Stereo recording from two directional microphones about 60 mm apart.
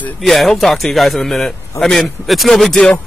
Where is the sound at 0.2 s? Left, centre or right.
Centre.